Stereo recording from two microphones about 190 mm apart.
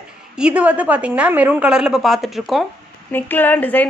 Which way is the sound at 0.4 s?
5° right (ahead or behind).